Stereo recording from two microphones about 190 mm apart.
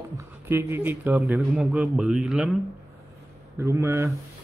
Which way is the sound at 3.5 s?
15° right (ahead or behind).